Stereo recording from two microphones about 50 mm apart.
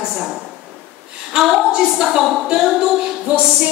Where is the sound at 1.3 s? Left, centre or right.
Centre.